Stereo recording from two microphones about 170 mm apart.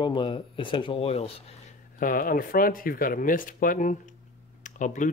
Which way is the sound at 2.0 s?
55° left (ahead or behind).